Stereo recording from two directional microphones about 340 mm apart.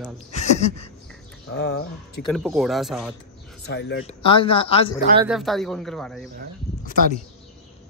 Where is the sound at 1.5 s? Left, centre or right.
Left.